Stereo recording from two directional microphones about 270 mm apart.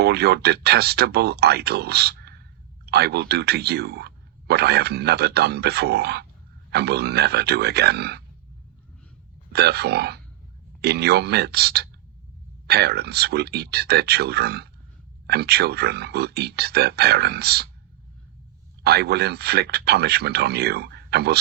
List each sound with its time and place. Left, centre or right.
0.0 s speech: right
9.5 s speech: right
18.8 s speech: right